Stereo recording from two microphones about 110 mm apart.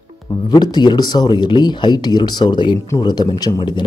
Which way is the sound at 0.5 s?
40° left (ahead or behind).